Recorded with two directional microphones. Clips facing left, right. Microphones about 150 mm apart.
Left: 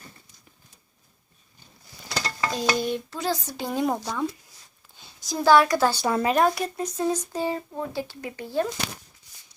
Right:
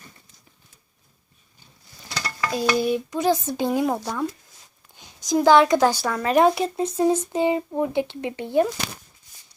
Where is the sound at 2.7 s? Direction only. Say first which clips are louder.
Right 5 dB; 10° right (ahead or behind).